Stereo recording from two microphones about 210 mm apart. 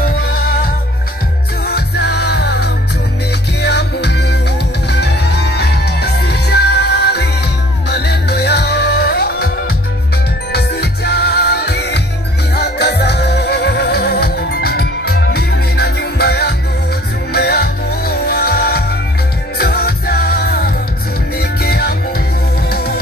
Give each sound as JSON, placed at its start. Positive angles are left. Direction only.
{"t": 0.0, "sound": "music", "side_deg": 45}
{"t": 1.7, "sound": "music", "side_deg": 50}
{"t": 10.5, "sound": "music", "side_deg": 50}